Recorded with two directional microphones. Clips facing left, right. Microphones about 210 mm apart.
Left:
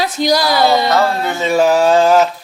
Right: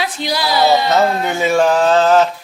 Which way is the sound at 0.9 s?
20° right (ahead or behind).